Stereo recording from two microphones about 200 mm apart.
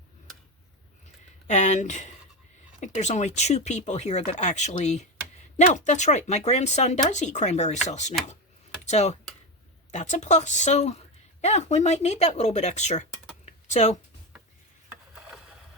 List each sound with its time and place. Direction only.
1.5 s speech: 35° left (ahead or behind)
13.4 s typing: 35° left (ahead or behind)
15.1 s a sound: 5° right (ahead or behind)